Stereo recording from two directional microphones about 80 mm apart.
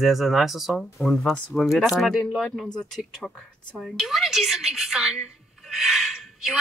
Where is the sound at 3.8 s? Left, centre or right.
Centre.